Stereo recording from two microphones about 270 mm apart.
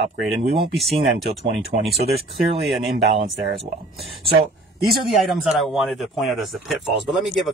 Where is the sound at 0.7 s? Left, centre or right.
Centre.